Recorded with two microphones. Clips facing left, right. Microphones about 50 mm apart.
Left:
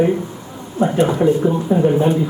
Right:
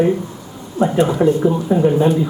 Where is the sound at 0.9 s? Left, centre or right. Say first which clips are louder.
Even; centre.